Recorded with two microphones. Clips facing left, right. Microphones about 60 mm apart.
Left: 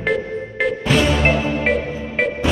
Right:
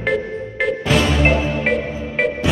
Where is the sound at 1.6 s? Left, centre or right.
Centre.